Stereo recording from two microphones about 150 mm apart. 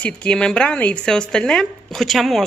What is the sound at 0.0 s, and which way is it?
Speech, 5° left (ahead or behind).